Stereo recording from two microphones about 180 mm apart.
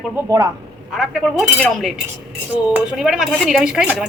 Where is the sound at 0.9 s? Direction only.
Centre (ahead or behind).